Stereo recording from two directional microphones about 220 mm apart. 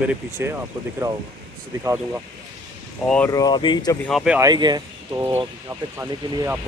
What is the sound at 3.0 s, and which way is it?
Speech, 5° left (ahead or behind).